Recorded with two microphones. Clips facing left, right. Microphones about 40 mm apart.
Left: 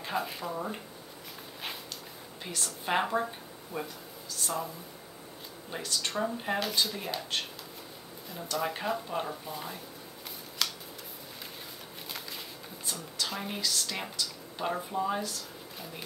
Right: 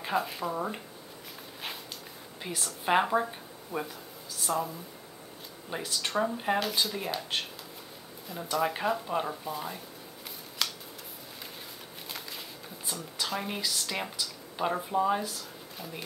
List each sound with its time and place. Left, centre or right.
0.0 s speech: centre
0.5 s speech: centre
2.4 s speech: centre
10.6 s scissors: centre
12.8 s speech: centre